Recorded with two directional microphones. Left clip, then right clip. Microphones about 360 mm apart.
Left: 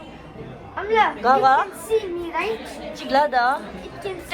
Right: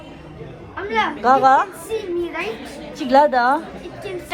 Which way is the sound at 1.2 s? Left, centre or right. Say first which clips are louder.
Right 7 dB; centre.